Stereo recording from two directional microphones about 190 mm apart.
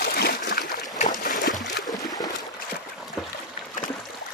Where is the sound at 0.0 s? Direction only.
55° left (ahead or behind).